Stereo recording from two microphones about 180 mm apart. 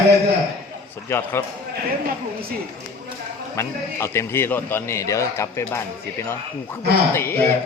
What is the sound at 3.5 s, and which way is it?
A man's voice, 15° left (ahead or behind).